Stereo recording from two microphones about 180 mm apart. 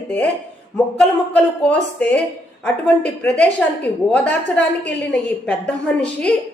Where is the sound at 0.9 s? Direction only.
5° left (ahead or behind).